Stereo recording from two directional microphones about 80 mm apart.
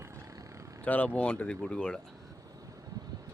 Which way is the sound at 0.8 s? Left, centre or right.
Left.